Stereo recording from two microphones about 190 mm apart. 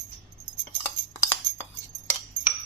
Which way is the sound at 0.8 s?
15° left (ahead or behind).